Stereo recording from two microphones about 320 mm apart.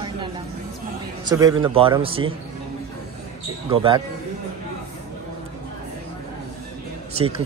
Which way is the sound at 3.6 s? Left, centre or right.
Centre.